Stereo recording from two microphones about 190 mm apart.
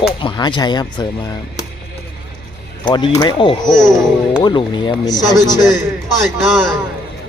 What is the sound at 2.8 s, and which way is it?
Speech, 25° left (ahead or behind).